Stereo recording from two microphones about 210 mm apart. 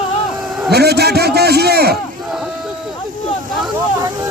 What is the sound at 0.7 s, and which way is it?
A man's voice, 50° right (ahead or behind).